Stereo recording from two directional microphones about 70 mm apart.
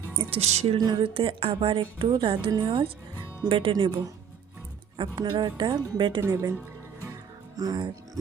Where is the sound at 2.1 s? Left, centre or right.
Right.